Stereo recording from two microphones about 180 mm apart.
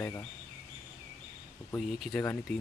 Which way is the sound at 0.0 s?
15° left (ahead or behind).